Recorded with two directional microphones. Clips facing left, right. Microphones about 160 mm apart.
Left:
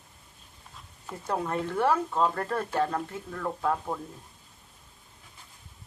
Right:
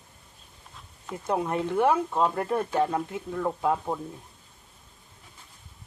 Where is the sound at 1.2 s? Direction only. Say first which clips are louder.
Right 3 dB; 15° right (ahead or behind).